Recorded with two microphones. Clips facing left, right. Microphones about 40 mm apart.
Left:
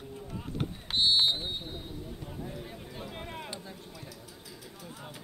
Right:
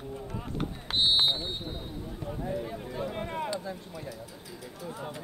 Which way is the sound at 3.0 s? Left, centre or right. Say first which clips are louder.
Right 8 dB; centre.